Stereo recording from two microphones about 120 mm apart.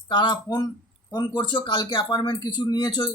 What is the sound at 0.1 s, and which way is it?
Speech, 35° left (ahead or behind).